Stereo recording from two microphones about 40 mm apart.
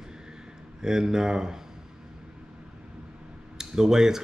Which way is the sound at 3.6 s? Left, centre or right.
Centre.